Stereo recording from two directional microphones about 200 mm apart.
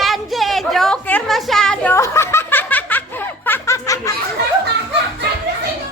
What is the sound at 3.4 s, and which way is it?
Snicker, 10° left (ahead or behind).